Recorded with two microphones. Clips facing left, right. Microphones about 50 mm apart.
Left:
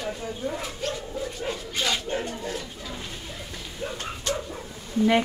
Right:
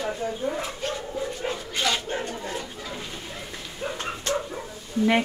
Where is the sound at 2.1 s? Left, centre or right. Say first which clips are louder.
Even; right.